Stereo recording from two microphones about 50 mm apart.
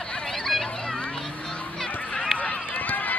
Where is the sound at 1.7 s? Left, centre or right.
Centre.